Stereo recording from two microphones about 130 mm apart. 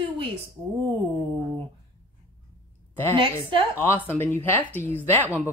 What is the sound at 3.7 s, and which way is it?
Speech, 15° left (ahead or behind).